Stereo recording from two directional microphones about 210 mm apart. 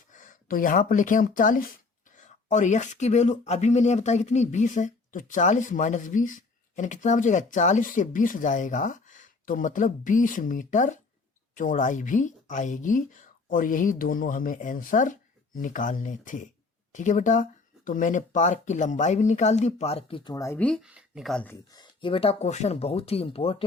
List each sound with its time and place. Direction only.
0.1 s speech: 40° left (ahead or behind)